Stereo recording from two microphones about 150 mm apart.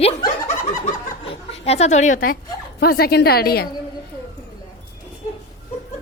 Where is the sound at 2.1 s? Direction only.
85° left.